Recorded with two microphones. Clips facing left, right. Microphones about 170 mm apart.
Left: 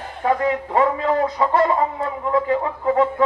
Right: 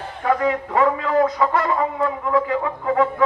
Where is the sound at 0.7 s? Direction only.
30° left (ahead or behind).